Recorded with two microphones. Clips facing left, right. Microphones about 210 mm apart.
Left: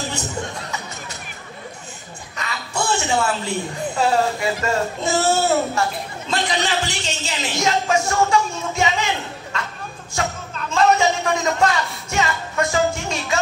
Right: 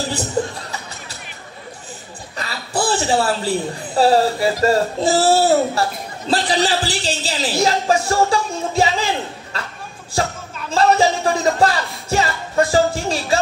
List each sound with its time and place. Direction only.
0.4 s a woman's voice: 35° right (ahead or behind)
2.3 s a woman's voice: 35° right (ahead or behind)